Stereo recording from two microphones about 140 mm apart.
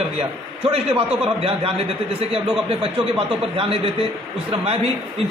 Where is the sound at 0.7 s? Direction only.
45° right (ahead or behind).